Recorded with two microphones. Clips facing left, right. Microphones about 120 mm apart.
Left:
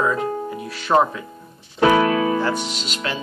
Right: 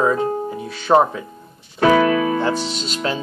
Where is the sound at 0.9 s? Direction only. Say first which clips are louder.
Right 3 dB; 30° right (ahead or behind).